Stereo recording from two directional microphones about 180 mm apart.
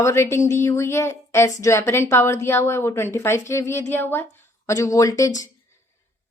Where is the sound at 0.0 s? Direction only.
15° left (ahead or behind).